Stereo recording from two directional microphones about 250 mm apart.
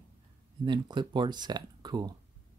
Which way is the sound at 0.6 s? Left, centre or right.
Centre.